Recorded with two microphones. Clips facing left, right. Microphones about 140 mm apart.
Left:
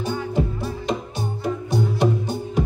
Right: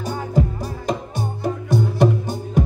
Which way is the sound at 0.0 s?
40° right (ahead or behind).